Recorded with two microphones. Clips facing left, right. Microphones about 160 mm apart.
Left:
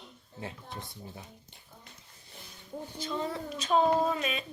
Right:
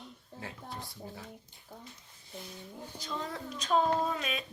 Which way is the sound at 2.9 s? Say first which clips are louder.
Left 4 dB; centre (ahead or behind).